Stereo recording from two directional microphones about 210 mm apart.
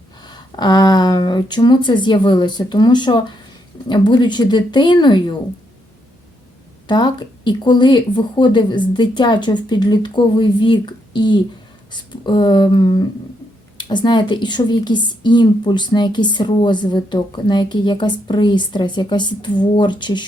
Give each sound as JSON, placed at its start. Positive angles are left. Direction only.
{"t": 0.2, "sound": "a woman's voice", "side_deg": 20}
{"t": 6.8, "sound": "a woman's voice", "side_deg": 20}